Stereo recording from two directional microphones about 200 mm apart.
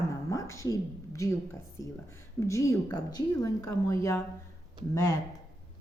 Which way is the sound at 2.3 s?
15° left (ahead or behind).